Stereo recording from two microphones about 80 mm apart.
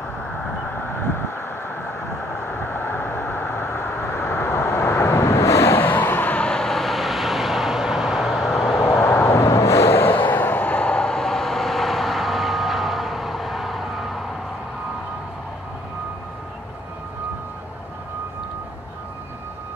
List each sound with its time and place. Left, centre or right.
0.7 s vehicle: left
2.3 s vehicle: left; by 8.7 s centre
9.0 s vehicle: left; by 14.2 s centre